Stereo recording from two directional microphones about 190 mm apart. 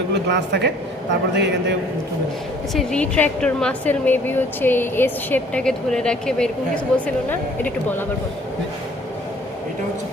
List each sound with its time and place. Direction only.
0.1 s a woman's voice: 65° right (ahead or behind)
2.7 s a woman's voice: 5° left (ahead or behind)